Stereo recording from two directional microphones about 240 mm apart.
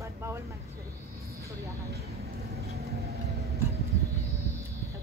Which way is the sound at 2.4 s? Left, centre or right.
Right.